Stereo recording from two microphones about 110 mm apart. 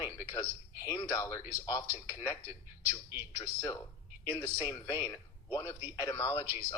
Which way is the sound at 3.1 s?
20° right (ahead or behind).